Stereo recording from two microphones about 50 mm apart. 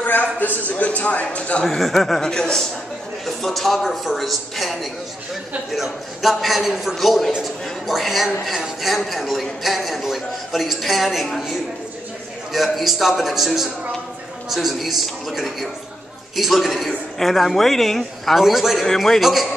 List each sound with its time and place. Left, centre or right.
0.0 s a man's voice: left
1.8 s a man's voice: centre
12.5 s a man's voice: centre